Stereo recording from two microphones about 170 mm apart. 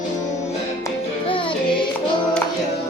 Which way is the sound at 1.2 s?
30° left (ahead or behind).